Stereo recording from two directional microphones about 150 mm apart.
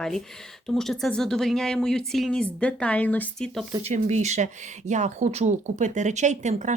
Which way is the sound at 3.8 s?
45° right (ahead or behind).